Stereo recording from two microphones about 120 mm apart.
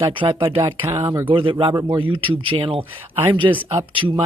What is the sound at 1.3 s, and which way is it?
Speech, 45° right (ahead or behind).